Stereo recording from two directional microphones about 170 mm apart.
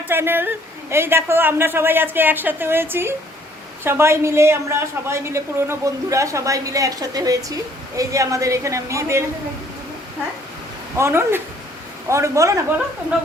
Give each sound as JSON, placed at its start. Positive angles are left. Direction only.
{"t": 0.1, "sound": "a woman's voice", "side_deg": -10}
{"t": 10.9, "sound": "a woman's voice", "side_deg": -15}